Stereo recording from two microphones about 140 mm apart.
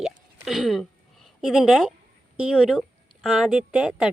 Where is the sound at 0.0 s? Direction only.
Centre (ahead or behind).